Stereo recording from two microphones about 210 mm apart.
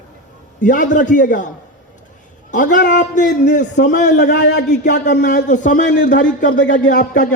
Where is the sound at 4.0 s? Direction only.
55° left (ahead or behind).